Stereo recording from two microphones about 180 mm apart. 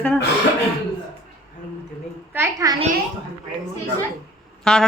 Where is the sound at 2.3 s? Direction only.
15° right (ahead or behind).